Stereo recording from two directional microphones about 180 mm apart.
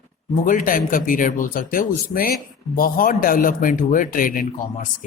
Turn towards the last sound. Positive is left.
turn(degrees=50)  # may be behind; listen again after turning